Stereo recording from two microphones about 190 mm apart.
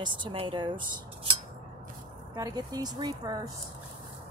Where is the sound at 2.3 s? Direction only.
20° right (ahead or behind).